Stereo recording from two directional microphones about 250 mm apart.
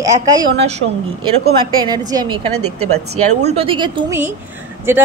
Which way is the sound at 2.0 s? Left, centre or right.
Centre.